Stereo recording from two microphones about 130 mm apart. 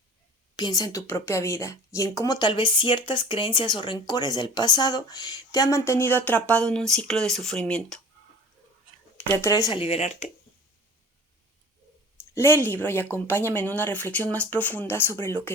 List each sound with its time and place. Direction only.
0.5 s a woman's voice: 30° left (ahead or behind); by 7.9 s 5° left (ahead or behind)
9.2 s a woman's voice: 25° left (ahead or behind)
9.7 s speech: 45° left (ahead or behind)
12.1 s a woman's voice: 20° left (ahead or behind)